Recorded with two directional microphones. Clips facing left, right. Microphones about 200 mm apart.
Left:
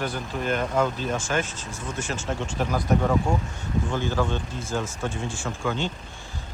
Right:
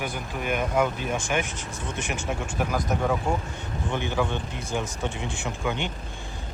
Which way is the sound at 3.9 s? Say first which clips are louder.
Right 1 dB; 20° right (ahead or behind).